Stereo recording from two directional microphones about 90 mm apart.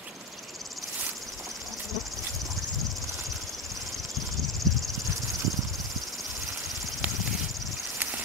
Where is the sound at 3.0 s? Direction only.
35° right (ahead or behind).